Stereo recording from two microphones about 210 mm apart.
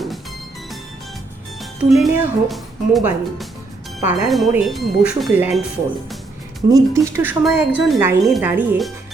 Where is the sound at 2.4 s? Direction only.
Centre (ahead or behind).